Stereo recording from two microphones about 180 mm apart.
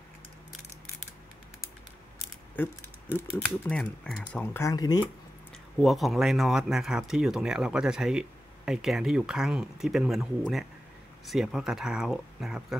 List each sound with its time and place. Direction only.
2.5 s mechanisms: 10° left (ahead or behind)
3.3 s speech: 5° left (ahead or behind); by 5.0 s 20° left (ahead or behind)
5.8 s speech: centre (ahead or behind)